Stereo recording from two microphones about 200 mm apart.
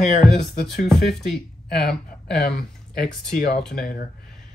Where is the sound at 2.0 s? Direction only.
55° left (ahead or behind).